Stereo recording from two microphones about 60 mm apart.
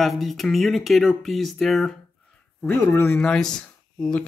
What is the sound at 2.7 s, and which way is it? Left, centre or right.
Speech, left.